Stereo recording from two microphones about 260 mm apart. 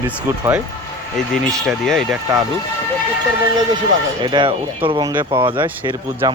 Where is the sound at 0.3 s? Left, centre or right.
Centre.